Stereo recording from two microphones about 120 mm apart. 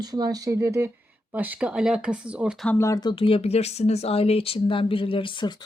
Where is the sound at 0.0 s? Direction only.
35° right (ahead or behind); by 2.6 s 10° right (ahead or behind).